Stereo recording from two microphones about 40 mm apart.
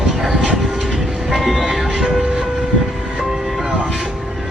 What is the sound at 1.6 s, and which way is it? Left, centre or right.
Speech, centre.